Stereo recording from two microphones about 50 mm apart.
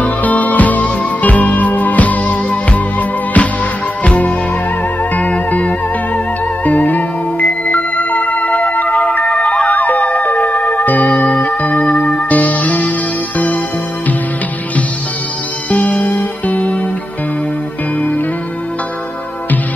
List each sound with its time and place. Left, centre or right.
0.0 s music: left
5.5 s music: left
9.7 s music: left
15.7 s music: left